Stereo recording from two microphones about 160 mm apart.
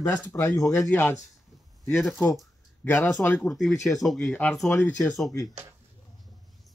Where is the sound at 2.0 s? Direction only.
Centre (ahead or behind).